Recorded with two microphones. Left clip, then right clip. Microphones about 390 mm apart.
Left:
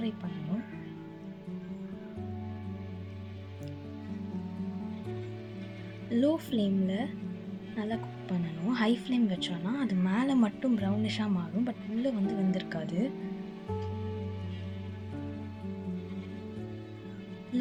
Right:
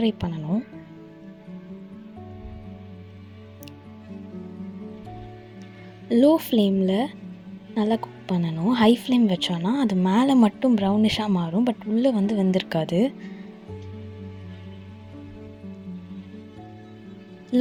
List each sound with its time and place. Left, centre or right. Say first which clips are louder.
0.2 s speech: right 10 dB; centre
6.1 s speech: right 11 dB; centre
17.5 s music: right 11 dB; centre